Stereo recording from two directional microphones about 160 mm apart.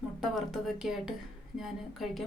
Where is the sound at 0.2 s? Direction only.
Centre (ahead or behind).